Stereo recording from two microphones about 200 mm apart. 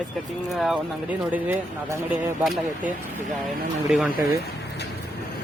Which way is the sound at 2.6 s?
40° right (ahead or behind).